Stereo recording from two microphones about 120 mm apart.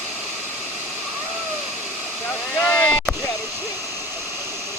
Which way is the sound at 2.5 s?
20° left (ahead or behind).